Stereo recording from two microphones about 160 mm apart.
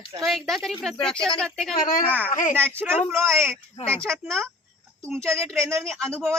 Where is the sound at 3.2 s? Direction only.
Centre (ahead or behind).